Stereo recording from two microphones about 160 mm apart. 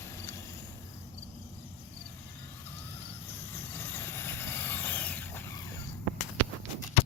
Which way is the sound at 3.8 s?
15° left (ahead or behind).